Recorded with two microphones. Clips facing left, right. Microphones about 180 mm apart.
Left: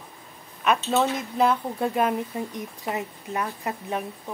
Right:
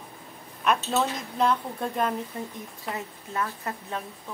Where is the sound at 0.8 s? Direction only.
5° left (ahead or behind).